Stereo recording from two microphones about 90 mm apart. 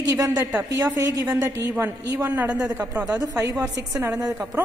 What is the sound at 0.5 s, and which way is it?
Speech, 20° right (ahead or behind).